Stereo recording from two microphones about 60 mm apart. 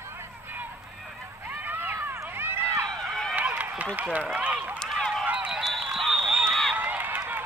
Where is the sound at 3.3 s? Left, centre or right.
Right.